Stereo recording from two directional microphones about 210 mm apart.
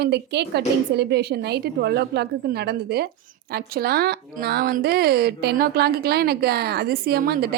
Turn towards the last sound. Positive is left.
turn(degrees=-50)  # may be behind; listen again after turning